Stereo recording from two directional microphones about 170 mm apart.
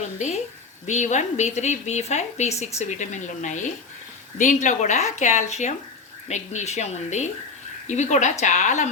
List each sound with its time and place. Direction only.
0.2 s a woman's voice: 40° left (ahead or behind)